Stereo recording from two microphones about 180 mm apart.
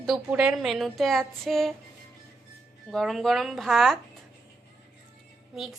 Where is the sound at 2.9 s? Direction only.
Centre (ahead or behind).